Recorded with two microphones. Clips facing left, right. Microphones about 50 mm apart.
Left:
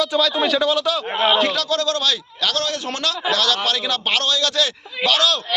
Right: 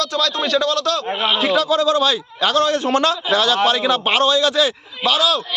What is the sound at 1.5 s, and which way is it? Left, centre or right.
A man's voice, centre.